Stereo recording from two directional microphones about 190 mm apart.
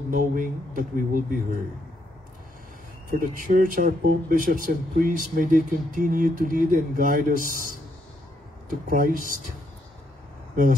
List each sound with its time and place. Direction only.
0.1 s speech: 45° right (ahead or behind)
3.1 s speech: 45° right (ahead or behind)
8.6 s speech: 45° right (ahead or behind)